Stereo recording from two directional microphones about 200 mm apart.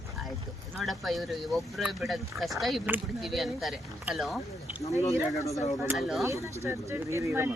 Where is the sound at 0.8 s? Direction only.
Centre (ahead or behind).